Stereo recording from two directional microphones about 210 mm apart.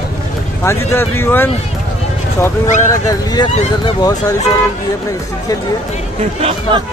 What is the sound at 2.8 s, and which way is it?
Speech, 15° left (ahead or behind).